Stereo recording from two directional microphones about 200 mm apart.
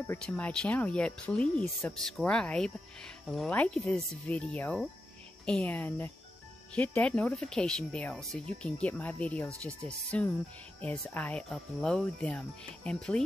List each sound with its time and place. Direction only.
0.0 s speech: 10° left (ahead or behind)